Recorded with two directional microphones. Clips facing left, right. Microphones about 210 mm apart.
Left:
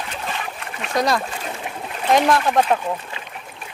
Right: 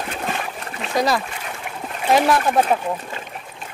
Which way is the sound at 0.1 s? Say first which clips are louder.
Right 3 dB; 50° right (ahead or behind).